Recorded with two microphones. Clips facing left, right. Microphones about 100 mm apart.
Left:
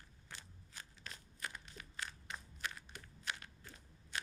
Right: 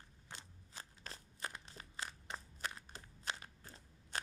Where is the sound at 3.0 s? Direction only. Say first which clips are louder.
Right 1 dB; 20° right (ahead or behind).